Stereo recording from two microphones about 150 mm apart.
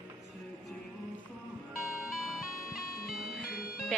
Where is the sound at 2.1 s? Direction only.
Centre (ahead or behind).